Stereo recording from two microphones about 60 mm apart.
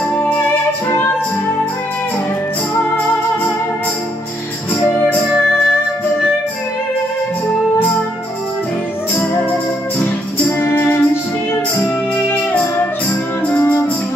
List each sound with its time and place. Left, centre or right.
10.6 s music: left
12.3 s music: left